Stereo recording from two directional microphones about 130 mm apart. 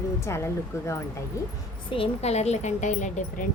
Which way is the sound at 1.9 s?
50° left (ahead or behind).